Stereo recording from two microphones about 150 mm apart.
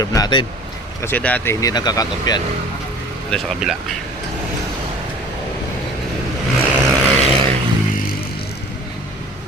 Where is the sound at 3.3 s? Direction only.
5° left (ahead or behind).